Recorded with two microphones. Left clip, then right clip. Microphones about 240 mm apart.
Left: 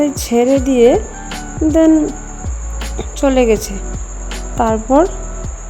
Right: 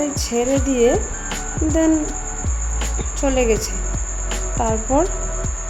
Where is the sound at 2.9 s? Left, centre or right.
Left.